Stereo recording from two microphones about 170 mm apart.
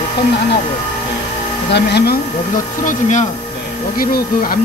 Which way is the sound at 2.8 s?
45° left (ahead or behind).